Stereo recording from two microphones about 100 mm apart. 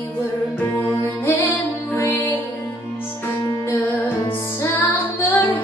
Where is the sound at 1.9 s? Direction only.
25° left (ahead or behind).